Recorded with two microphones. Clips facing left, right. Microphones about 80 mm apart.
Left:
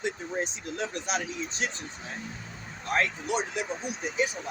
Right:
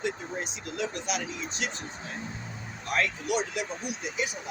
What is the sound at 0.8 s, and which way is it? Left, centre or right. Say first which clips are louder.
Speech: even; left.